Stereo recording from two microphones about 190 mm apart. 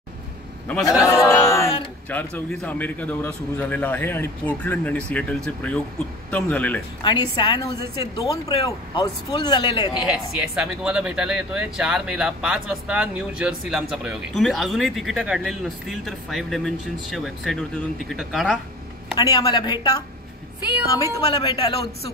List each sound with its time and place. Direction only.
0.8 s speech: 15° left (ahead or behind)
7.0 s speech: 25° left (ahead or behind)
10.0 s speech: 5° right (ahead or behind)
19.1 s speech: 20° left (ahead or behind)
21.0 s speech: 20° left (ahead or behind)